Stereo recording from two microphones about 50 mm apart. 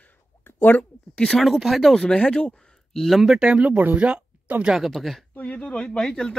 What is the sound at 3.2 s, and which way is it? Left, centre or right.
Speech, centre.